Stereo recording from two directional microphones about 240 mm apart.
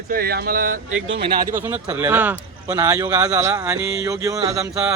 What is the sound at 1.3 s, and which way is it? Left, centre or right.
A man's voice, centre.